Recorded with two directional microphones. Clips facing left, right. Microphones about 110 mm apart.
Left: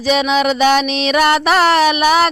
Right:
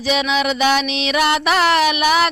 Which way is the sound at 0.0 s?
40° left (ahead or behind).